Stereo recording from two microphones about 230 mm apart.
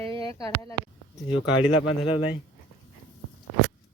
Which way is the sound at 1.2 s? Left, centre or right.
Left.